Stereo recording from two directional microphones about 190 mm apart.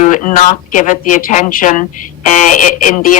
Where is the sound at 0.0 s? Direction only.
40° left (ahead or behind).